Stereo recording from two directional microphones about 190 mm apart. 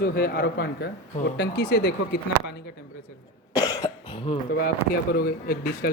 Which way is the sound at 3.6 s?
20° left (ahead or behind).